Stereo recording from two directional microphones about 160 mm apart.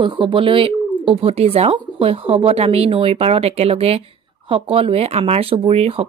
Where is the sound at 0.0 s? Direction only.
30° right (ahead or behind).